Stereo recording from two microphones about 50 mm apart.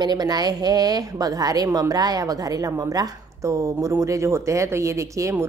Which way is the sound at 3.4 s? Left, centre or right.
Right.